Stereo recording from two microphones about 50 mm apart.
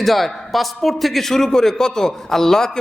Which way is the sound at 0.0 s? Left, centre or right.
Centre.